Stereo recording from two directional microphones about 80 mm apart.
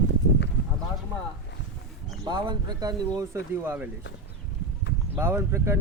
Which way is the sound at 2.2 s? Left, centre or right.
Right.